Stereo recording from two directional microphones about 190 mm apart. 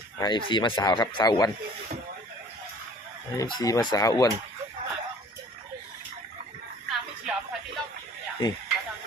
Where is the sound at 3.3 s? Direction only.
20° left (ahead or behind).